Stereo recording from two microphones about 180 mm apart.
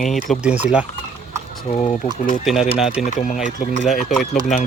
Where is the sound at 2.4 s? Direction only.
Centre (ahead or behind).